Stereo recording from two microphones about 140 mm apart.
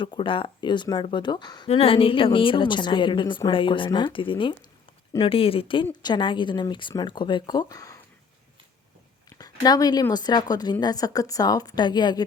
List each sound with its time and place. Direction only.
0.0 s a woman's voice: 35° left (ahead or behind)
1.6 s a woman's voice: 45° left (ahead or behind); by 7.9 s 25° left (ahead or behind)
9.4 s a woman's voice: 30° left (ahead or behind)